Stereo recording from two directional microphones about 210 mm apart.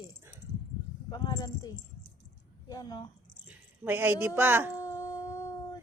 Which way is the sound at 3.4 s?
10° right (ahead or behind).